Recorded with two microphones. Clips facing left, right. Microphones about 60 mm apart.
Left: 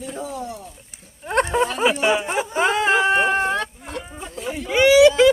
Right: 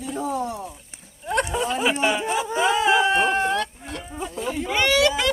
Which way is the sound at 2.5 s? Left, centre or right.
Left.